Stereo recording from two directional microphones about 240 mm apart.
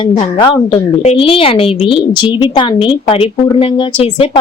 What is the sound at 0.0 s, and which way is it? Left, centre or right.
A woman's voice, centre.